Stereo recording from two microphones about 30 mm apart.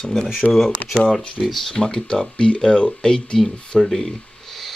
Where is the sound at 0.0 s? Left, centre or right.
Centre.